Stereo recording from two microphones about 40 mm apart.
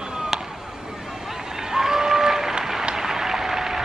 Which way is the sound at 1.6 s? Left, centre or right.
Centre.